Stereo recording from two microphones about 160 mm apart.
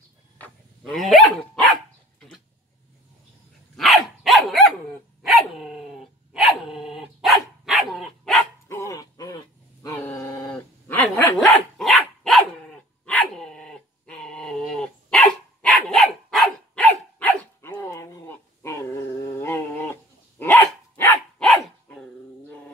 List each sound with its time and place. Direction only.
0.4 s dog: 5° left (ahead or behind)
3.7 s dog: centre (ahead or behind)
8.6 s dog: 20° left (ahead or behind)
11.3 s dog: centre (ahead or behind)